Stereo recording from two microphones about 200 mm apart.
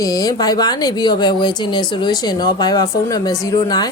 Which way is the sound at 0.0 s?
20° left (ahead or behind).